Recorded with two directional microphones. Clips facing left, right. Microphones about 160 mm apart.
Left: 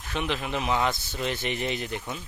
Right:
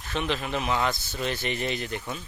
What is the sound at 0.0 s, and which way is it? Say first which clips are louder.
Speech: right 1 dB; 10° left (ahead or behind).